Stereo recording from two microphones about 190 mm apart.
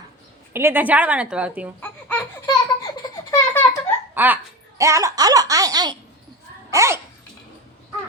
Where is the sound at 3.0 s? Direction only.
15° left (ahead or behind).